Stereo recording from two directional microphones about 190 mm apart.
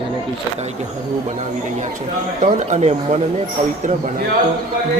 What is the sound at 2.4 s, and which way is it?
Speech, 35° right (ahead or behind).